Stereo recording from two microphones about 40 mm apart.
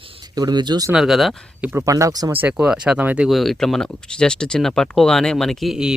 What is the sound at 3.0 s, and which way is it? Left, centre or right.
Speech, right.